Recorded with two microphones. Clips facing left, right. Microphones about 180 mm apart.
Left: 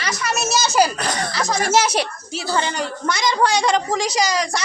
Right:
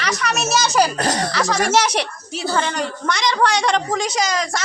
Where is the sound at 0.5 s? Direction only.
5° left (ahead or behind).